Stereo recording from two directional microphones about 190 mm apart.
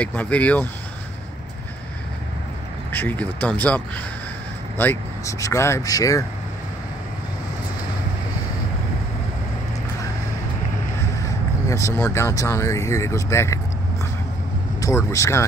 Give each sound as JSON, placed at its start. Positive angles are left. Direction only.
{"t": 0.0, "sound": "speech", "side_deg": 5}
{"t": 2.9, "sound": "speech", "side_deg": 10}
{"t": 11.2, "sound": "a sound", "side_deg": 15}
{"t": 12.0, "sound": "speech", "side_deg": 15}
{"t": 14.8, "sound": "speech", "side_deg": 15}